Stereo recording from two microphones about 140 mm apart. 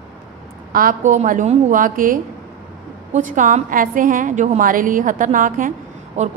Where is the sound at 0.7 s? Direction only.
75° right (ahead or behind).